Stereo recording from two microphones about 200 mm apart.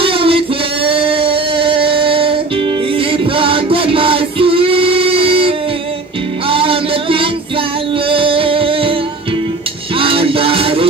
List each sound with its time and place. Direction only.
0.0 s a sound: 25° right (ahead or behind)
0.8 s music: 25° right (ahead or behind)
9.9 s music: 25° right (ahead or behind)